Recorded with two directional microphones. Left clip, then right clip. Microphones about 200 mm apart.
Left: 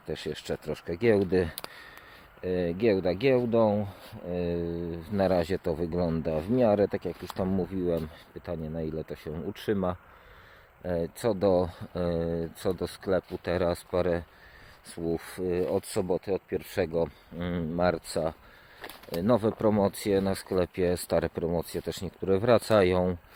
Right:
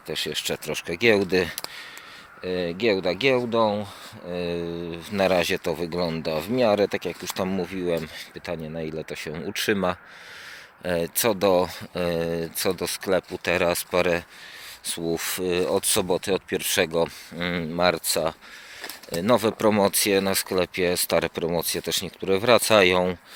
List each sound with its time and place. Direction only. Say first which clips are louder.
0.1 s speech: right 6 dB; 25° left (ahead or behind)
4.6 s speech: right 3 dB; centre (ahead or behind)
4.9 s speech: right 5 dB; 20° left (ahead or behind)
9.3 s speech: right 6 dB; 15° left (ahead or behind)